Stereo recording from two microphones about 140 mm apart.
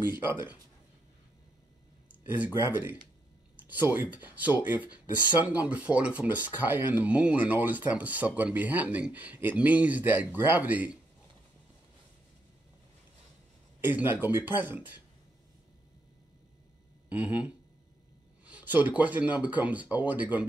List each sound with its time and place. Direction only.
0.2 s speech: 15° right (ahead or behind)
2.2 s speech: 15° right (ahead or behind)
13.7 s speech: 15° right (ahead or behind)
17.1 s speech: 10° right (ahead or behind)